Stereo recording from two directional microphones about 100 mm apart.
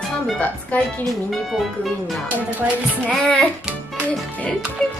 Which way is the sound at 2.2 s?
15° right (ahead or behind).